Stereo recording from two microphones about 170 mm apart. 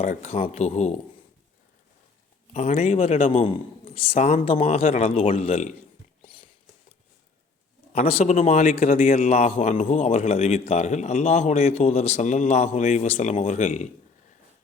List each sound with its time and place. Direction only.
0.0 s a man's voice: 40° left (ahead or behind)
2.5 s a man's voice: 40° left (ahead or behind)
6.2 s a sound: 30° left (ahead or behind)
7.9 s a man's voice: 40° left (ahead or behind)